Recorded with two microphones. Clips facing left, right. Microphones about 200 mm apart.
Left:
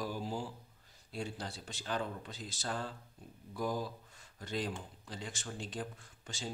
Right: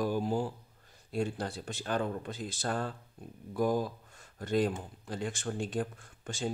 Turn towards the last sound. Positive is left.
turn(degrees=-55)  # may be behind; listen again after turning